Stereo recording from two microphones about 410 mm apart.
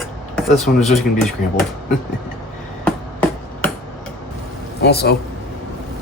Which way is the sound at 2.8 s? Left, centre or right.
Centre.